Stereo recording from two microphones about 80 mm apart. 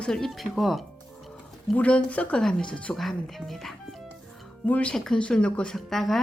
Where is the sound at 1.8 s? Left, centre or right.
Centre.